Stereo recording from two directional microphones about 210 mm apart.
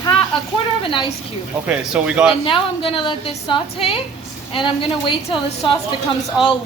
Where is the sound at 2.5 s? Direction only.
25° left (ahead or behind).